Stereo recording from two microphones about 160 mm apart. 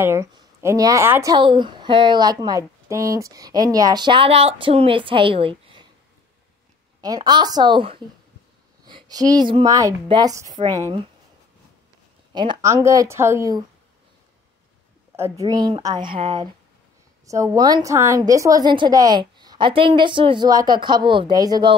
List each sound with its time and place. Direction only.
0.0 s speech: 15° right (ahead or behind); by 5.9 s 35° right (ahead or behind)
7.0 s a woman's voice: 25° right (ahead or behind)
12.3 s speech: 30° right (ahead or behind)
15.1 s speech: 20° right (ahead or behind)